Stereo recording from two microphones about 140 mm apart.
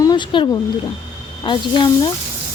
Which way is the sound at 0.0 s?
30° left (ahead or behind).